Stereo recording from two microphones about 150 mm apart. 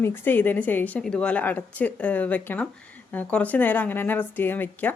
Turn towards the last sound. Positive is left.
turn(degrees=10)  # may be behind; listen again after turning